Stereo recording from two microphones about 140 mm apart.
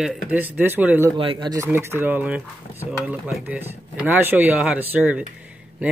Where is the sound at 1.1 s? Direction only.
35° right (ahead or behind).